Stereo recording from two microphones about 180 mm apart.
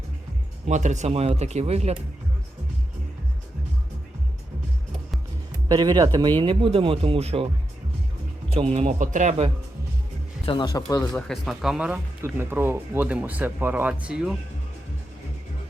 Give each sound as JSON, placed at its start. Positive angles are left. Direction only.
{"t": 0.7, "sound": "speech", "side_deg": -40}
{"t": 5.6, "sound": "speech", "side_deg": -20}
{"t": 8.7, "sound": "speech", "side_deg": -40}
{"t": 10.4, "sound": "speech", "side_deg": 25}
{"t": 11.0, "sound": "speech", "side_deg": 0}